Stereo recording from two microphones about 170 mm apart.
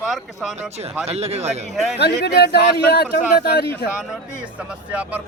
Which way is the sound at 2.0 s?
75° left (ahead or behind).